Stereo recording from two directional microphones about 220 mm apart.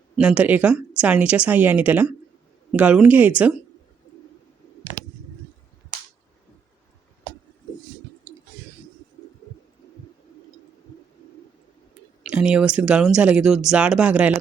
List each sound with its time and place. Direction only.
0.2 s speech: 5° right (ahead or behind)
12.2 s speech: 5° right (ahead or behind)